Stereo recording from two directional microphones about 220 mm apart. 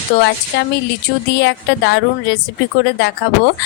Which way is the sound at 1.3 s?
55° left (ahead or behind).